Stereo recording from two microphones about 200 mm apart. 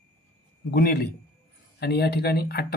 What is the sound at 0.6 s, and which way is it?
Speech, 50° left (ahead or behind).